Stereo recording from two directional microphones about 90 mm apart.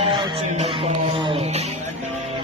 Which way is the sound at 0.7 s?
75° right (ahead or behind).